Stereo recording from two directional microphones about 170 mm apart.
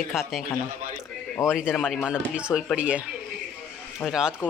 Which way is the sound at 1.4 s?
15° left (ahead or behind).